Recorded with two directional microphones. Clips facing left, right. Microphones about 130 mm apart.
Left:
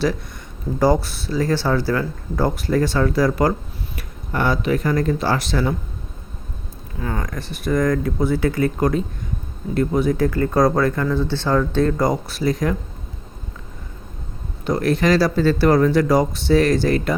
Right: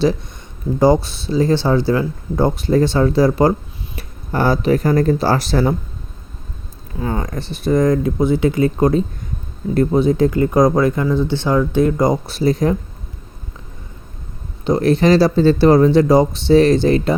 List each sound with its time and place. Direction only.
1.0 s speech: 20° right (ahead or behind)
7.0 s speech: 25° right (ahead or behind)
14.6 s speech: 25° right (ahead or behind)